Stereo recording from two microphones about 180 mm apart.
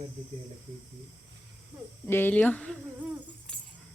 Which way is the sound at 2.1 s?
10° left (ahead or behind).